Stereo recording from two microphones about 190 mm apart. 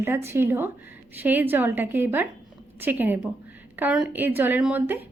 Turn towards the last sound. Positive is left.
turn(degrees=-10)  # may be behind; listen again after turning